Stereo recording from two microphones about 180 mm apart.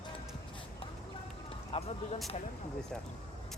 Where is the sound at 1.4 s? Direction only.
35° left (ahead or behind).